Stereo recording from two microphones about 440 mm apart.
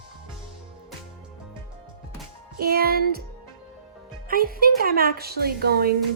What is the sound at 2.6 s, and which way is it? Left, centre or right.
Speech, right.